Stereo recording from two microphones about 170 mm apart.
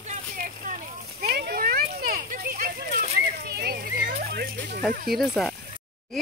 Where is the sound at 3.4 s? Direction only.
70° right (ahead or behind).